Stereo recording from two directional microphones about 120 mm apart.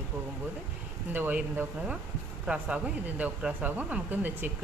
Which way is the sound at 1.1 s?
15° right (ahead or behind).